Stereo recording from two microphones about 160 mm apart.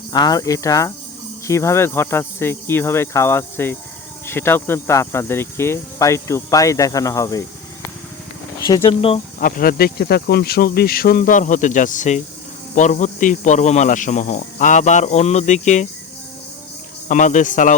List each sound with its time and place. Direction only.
0.1 s speech: 25° left (ahead or behind)
1.5 s cricket: 15° left (ahead or behind)
4.3 s speech: 15° left (ahead or behind)
8.6 s speech: 30° left (ahead or behind)
9.4 s speech: 60° left (ahead or behind)
17.1 s speech: 50° left (ahead or behind)